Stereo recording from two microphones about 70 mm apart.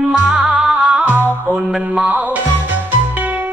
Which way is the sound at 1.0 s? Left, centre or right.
Right.